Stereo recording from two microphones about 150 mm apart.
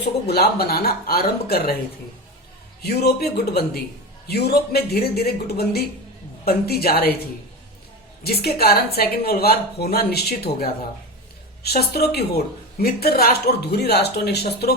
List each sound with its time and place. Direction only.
0.0 s a woman's voice: 90° left
2.8 s a woman's voice: 90° left
8.2 s a woman's voice: 90° left